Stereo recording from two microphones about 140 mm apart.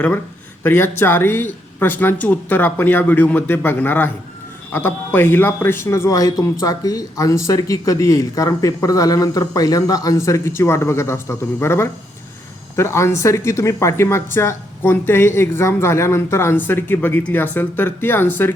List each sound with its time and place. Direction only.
0.6 s speech: 15° left (ahead or behind)